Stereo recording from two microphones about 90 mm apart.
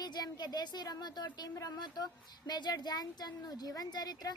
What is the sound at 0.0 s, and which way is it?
A woman's voice, 50° left (ahead or behind).